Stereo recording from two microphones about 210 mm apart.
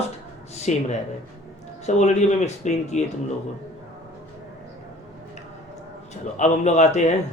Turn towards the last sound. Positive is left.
turn(degrees=35)  # may be behind; listen again after turning